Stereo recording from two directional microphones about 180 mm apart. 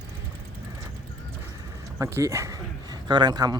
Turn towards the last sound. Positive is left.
turn(degrees=-20)  # may be behind; listen again after turning